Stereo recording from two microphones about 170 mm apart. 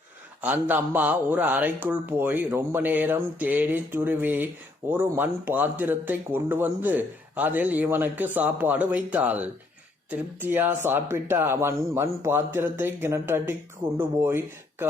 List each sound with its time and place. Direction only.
0.4 s speech: 10° right (ahead or behind)